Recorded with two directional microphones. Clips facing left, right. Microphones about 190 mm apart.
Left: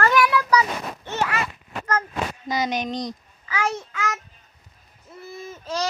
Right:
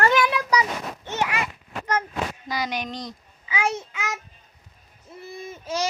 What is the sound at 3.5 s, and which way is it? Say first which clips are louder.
Speech: even; 15° right (ahead or behind).